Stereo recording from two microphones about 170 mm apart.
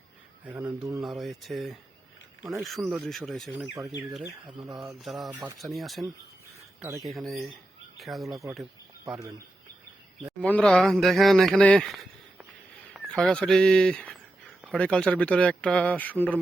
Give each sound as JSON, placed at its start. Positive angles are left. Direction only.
{"t": 0.4, "sound": "speech", "side_deg": -10}
{"t": 1.0, "sound": "a man's voice", "side_deg": 0}
{"t": 4.3, "sound": "speech", "side_deg": -20}
{"t": 4.8, "sound": "a man's voice", "side_deg": 0}
{"t": 10.4, "sound": "a man's voice", "side_deg": 5}